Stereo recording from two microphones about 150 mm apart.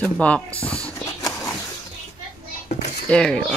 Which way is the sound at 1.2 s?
20° left (ahead or behind).